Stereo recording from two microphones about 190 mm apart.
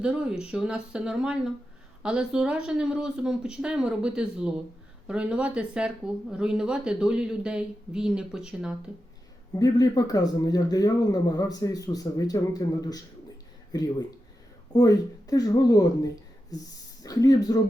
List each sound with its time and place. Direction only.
0.0 s speech: 5° right (ahead or behind)
9.6 s speech: 20° left (ahead or behind)